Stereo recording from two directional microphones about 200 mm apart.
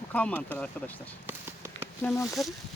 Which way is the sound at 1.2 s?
10° right (ahead or behind).